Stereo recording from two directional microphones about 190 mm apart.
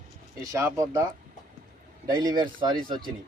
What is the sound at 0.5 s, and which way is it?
Speech, 15° right (ahead or behind).